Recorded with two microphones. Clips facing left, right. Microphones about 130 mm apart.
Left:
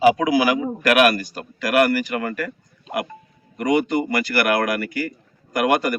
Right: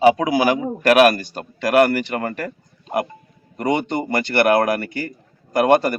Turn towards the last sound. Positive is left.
turn(degrees=-30)  # may be behind; listen again after turning